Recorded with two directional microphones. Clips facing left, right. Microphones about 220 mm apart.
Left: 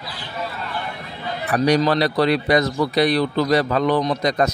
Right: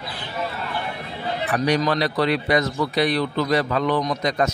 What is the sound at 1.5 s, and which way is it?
Speech, 35° left (ahead or behind).